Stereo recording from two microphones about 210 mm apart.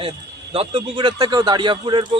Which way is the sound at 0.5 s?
25° right (ahead or behind).